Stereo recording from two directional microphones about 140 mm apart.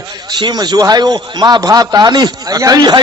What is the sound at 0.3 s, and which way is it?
A man's voice, 30° right (ahead or behind).